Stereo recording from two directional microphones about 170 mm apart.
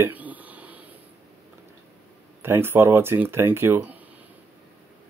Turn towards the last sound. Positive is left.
turn(degrees=-15)  # may be behind; listen again after turning